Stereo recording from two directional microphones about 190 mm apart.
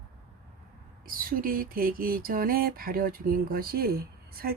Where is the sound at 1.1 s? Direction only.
50° right (ahead or behind).